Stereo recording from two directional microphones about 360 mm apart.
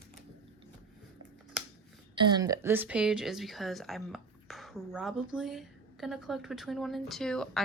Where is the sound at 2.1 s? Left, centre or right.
Centre.